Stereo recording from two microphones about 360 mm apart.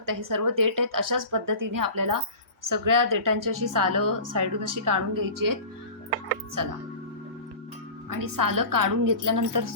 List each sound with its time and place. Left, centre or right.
0.0 s a woman's voice: right
6.6 s a woman's voice: right
8.1 s a woman's voice: right